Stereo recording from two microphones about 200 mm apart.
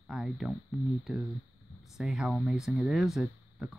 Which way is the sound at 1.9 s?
Centre (ahead or behind).